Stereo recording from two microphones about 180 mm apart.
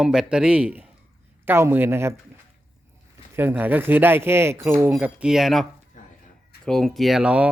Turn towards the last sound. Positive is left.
turn(degrees=-5)  # may be behind; listen again after turning